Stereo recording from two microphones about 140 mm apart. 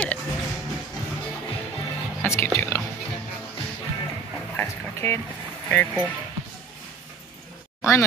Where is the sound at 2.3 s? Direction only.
20° left (ahead or behind).